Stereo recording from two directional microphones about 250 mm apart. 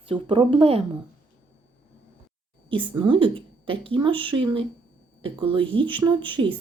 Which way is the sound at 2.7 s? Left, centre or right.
Centre.